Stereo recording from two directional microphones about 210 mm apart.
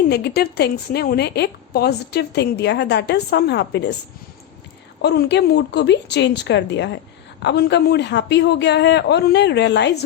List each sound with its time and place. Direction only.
0.1 s a woman's voice: 50° left (ahead or behind)
5.0 s a man's voice: 50° left (ahead or behind)